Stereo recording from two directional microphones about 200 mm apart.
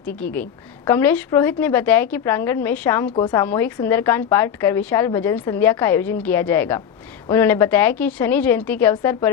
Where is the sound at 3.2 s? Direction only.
20° left (ahead or behind).